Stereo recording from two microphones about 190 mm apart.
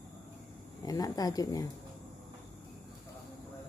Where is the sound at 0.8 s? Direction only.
20° left (ahead or behind).